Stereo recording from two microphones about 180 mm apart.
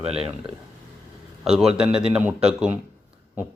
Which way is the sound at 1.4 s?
5° right (ahead or behind).